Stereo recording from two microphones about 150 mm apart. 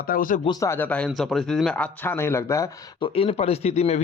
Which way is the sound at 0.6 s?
15° left (ahead or behind).